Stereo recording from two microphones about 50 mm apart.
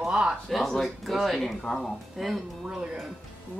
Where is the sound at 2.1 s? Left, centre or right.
Centre.